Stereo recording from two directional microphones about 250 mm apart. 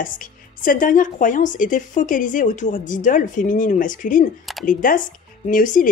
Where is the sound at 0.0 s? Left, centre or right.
Left.